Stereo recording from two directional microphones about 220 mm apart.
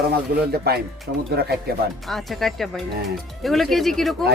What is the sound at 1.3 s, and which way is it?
Speech, 45° right (ahead or behind).